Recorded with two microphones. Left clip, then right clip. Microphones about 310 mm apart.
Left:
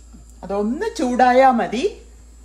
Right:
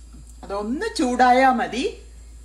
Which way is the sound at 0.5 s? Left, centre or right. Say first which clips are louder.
Left 3 dB; left.